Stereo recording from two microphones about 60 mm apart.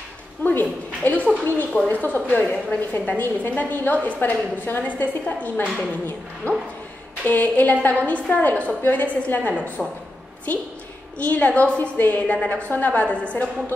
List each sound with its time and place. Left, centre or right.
0.4 s a woman's voice: left
9.8 s speech: centre
10.5 s a woman's voice: left